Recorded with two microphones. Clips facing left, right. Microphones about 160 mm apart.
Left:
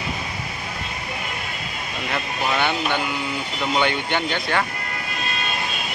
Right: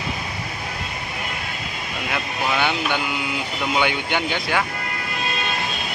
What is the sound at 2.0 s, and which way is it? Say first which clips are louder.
Speech: even; 5° right (ahead or behind).